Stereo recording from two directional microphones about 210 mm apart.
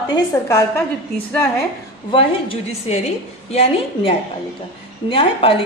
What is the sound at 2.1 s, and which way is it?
A woman's voice, 25° left (ahead or behind).